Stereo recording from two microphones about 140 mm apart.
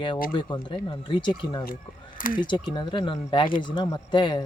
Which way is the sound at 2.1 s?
80° left.